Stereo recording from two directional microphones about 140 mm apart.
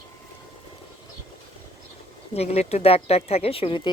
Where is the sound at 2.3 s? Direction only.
50° left (ahead or behind).